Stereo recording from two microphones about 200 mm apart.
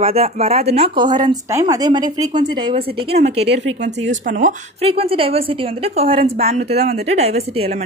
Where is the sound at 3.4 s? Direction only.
60° right (ahead or behind).